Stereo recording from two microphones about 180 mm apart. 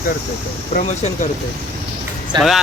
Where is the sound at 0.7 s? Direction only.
45° left (ahead or behind).